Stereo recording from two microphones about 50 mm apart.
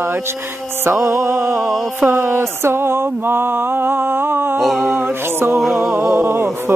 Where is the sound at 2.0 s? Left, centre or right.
Right.